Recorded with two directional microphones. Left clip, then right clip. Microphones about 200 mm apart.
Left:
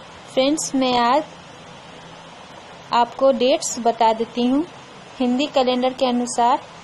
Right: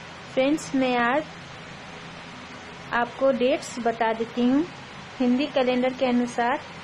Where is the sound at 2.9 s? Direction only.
15° left (ahead or behind).